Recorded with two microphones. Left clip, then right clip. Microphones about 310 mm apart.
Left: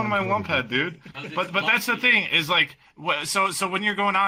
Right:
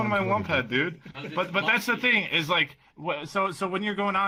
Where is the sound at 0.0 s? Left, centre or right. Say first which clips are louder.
Left 2 dB; centre.